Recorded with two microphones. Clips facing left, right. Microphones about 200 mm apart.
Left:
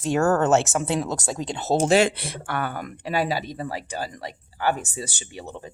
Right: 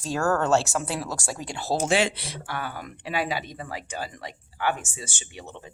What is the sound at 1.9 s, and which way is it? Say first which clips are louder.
Speech: left 5 dB; 50° left (ahead or behind).